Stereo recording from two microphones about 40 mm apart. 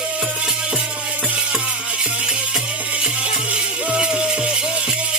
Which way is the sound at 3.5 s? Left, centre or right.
Right.